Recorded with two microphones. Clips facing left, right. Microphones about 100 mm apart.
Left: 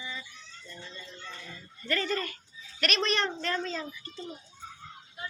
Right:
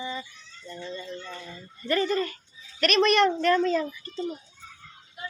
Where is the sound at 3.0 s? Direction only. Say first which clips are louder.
Right 12 dB; 65° right (ahead or behind).